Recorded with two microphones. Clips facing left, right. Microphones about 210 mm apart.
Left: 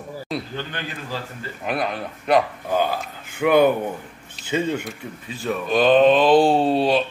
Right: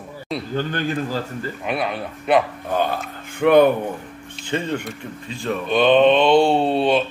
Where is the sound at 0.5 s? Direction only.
45° right (ahead or behind).